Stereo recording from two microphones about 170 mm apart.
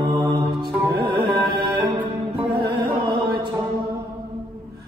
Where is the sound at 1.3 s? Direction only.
70° right (ahead or behind).